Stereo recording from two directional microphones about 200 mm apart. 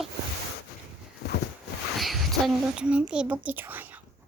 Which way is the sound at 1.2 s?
55° left (ahead or behind).